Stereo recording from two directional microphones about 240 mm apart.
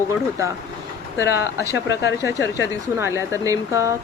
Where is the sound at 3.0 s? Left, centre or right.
Centre.